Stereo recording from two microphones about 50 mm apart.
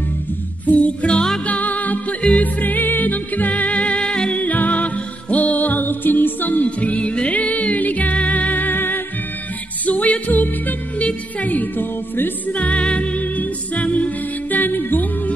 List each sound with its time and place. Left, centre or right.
0.7 s music: left
4.4 s music: left
9.8 s music: left
12.5 s music: left